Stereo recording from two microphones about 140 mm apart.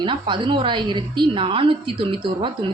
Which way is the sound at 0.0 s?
35° right (ahead or behind).